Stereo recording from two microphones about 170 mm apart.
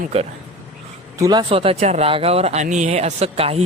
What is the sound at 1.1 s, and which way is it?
Speech, 20° right (ahead or behind).